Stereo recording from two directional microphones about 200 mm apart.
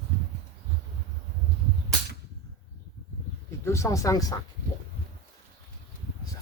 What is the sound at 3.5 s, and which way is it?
Speech, 15° left (ahead or behind).